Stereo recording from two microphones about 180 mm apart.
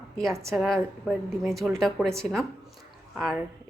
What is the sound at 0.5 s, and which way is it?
Speech, centre (ahead or behind).